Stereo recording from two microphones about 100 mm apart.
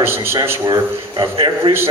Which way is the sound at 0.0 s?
25° right (ahead or behind).